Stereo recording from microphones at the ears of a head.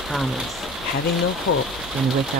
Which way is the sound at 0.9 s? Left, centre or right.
Left.